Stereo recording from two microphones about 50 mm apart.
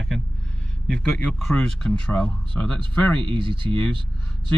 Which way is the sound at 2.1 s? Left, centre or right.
Left.